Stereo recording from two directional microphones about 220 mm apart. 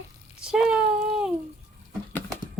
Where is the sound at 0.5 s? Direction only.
5° right (ahead or behind).